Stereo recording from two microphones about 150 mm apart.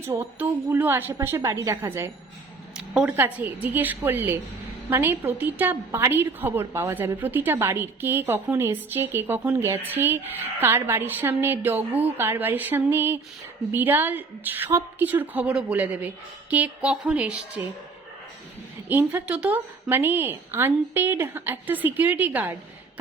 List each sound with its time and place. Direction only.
0.1 s a woman's voice: 15° right (ahead or behind)
2.7 s a sound: 5° right (ahead or behind)
3.2 s a woman's voice: 10° right (ahead or behind)
18.9 s a woman's voice: 10° right (ahead or behind)